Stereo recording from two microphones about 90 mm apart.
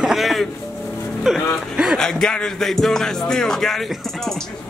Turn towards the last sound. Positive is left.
turn(degrees=5)  # may be behind; listen again after turning